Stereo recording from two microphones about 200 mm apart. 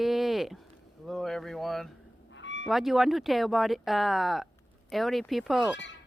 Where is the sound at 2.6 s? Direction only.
Centre (ahead or behind).